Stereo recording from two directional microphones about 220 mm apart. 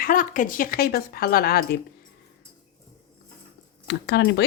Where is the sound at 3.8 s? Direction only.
50° left (ahead or behind).